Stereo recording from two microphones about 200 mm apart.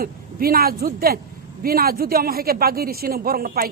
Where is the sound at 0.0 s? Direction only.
50° right (ahead or behind).